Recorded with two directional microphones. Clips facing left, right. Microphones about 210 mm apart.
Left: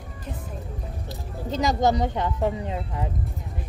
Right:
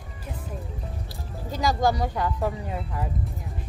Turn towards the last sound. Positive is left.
turn(degrees=20)  # may be behind; listen again after turning